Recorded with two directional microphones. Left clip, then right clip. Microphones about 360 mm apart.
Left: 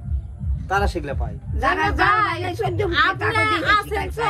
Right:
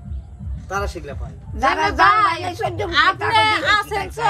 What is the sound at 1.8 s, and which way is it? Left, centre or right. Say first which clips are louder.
Speech: right 5 dB; right.